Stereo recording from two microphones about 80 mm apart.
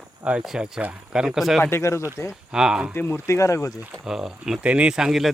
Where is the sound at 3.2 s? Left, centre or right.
Left.